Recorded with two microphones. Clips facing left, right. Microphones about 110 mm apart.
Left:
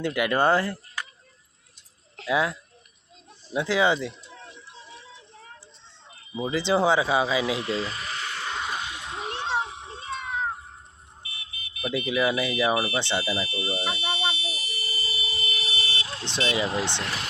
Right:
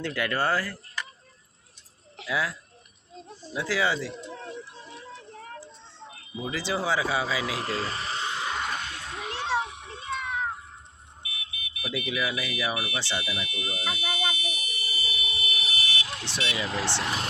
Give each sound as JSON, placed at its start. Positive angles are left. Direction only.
{"t": 0.0, "sound": "speech", "side_deg": 15}
{"t": 2.2, "sound": "speech", "side_deg": 25}
{"t": 4.3, "sound": "a sound", "side_deg": -40}
{"t": 6.5, "sound": "speech", "side_deg": 25}
{"t": 7.6, "sound": "a sound", "side_deg": -40}
{"t": 8.5, "sound": "a sound", "side_deg": 10}
{"t": 9.1, "sound": "children playing", "side_deg": 25}
{"t": 11.2, "sound": "speech", "side_deg": 35}
{"t": 13.0, "sound": "buzzer", "side_deg": 25}
{"t": 16.4, "sound": "speech", "side_deg": 30}